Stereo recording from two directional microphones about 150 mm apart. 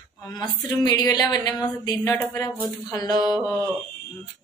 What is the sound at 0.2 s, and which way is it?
Speech, 25° left (ahead or behind).